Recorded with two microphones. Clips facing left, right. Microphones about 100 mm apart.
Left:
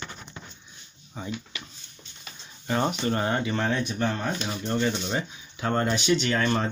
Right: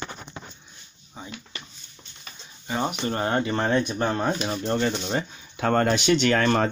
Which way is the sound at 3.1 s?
40° right (ahead or behind).